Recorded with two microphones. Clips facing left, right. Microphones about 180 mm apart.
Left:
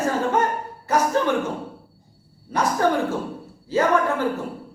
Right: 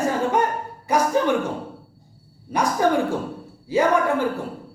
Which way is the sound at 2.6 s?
15° right (ahead or behind).